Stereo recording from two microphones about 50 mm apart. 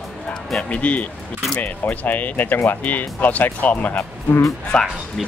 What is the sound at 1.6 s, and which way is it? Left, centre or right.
Speech, left.